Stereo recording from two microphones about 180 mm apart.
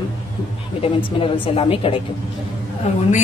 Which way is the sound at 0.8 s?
30° left (ahead or behind).